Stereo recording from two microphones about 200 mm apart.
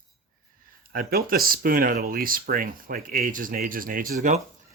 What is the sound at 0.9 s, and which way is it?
Speech, 45° right (ahead or behind).